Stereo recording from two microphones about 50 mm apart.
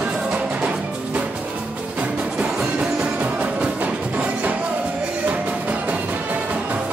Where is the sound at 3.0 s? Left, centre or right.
Right.